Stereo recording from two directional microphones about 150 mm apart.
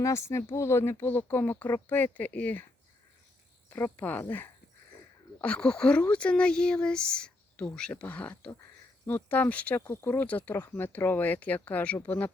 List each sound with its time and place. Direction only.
0.0 s speech: 20° left (ahead or behind)
3.7 s speech: 10° left (ahead or behind)